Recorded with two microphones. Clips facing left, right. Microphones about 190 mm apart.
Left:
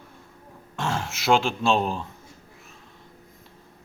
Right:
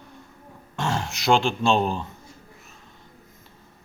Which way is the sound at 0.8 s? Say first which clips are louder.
Right 1 dB; centre (ahead or behind).